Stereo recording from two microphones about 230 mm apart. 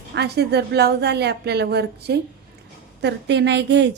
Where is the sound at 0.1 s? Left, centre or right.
Right.